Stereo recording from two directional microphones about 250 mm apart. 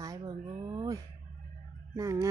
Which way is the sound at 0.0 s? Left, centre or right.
Centre.